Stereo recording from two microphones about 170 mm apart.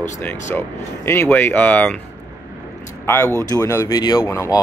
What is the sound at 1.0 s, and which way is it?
Speech, 15° left (ahead or behind).